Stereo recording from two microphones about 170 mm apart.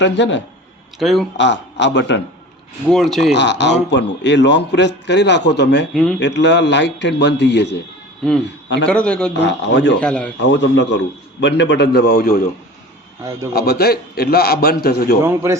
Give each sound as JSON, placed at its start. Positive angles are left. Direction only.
{"t": 0.0, "sound": "a man's voice", "side_deg": 90}
{"t": 0.9, "sound": "a man's voice", "side_deg": 0}
{"t": 1.4, "sound": "a man's voice", "side_deg": 90}
{"t": 2.9, "sound": "a man's voice", "side_deg": 0}
{"t": 3.3, "sound": "a man's voice", "side_deg": 90}
{"t": 5.9, "sound": "a man's voice", "side_deg": 0}
{"t": 6.1, "sound": "a man's voice", "side_deg": 90}
{"t": 8.9, "sound": "a man's voice", "side_deg": 5}
{"t": 9.4, "sound": "a man's voice", "side_deg": 90}
{"t": 10.0, "sound": "a man's voice", "side_deg": 5}
{"t": 10.4, "sound": "a man's voice", "side_deg": 90}
{"t": 13.5, "sound": "a man's voice", "side_deg": 65}
{"t": 15.2, "sound": "a man's voice", "side_deg": -15}